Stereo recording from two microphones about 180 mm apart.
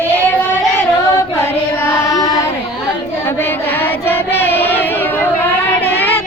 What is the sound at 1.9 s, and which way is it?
Child singing, 20° left (ahead or behind).